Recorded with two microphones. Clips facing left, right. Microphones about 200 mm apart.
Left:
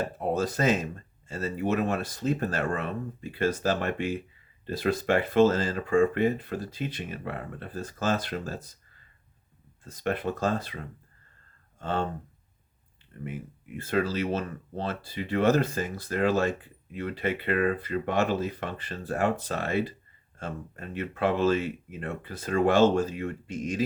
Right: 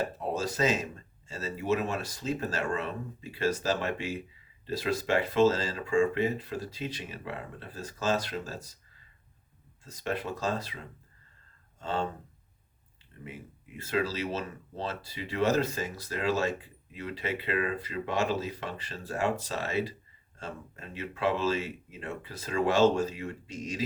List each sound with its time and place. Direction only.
0.2 s speech: 55° left (ahead or behind)
9.8 s speech: 55° left (ahead or behind)
11.8 s speech: 55° left (ahead or behind)
13.2 s speech: 55° left (ahead or behind)